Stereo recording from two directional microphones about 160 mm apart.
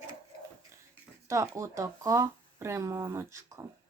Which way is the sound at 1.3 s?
20° right (ahead or behind).